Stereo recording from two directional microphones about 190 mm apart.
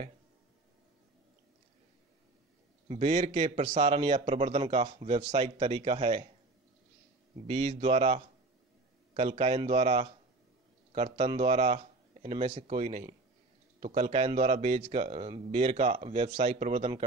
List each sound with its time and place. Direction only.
2.9 s a man's voice: 30° right (ahead or behind)
7.4 s a man's voice: 30° right (ahead or behind)